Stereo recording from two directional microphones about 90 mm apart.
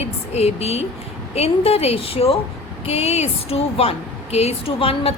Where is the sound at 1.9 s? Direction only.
90° left.